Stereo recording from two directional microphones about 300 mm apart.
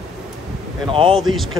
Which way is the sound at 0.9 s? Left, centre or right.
Centre.